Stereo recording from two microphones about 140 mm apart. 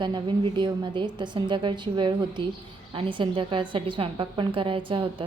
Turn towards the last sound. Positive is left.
turn(degrees=-40)  # may be behind; listen again after turning